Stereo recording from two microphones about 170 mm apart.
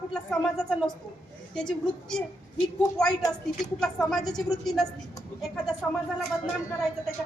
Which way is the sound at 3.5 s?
5° left (ahead or behind).